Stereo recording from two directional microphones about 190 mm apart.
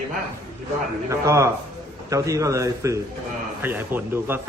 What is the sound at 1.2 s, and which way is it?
Speech, 15° right (ahead or behind).